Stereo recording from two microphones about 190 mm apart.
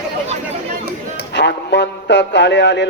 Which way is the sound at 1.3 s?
65° left (ahead or behind).